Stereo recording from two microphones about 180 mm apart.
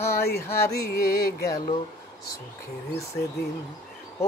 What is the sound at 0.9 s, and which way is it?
Music, 60° left (ahead or behind).